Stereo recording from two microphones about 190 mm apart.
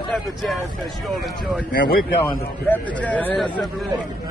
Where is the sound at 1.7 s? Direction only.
50° left (ahead or behind).